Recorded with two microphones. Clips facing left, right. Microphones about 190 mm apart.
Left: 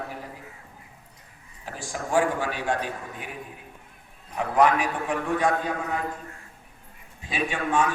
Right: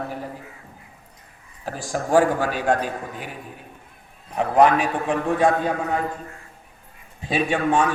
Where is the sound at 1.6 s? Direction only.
40° right (ahead or behind).